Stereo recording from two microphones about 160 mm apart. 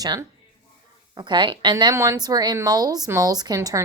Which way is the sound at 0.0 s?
25° right (ahead or behind).